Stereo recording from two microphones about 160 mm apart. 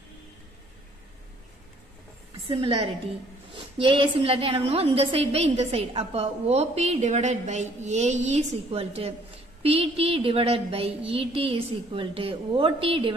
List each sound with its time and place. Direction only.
2.4 s a woman's voice: 35° right (ahead or behind)